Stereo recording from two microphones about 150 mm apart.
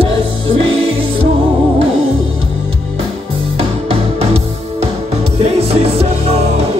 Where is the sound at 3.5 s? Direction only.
40° right (ahead or behind).